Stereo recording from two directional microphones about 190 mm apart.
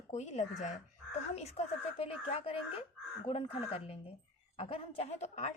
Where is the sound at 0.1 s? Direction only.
40° left (ahead or behind).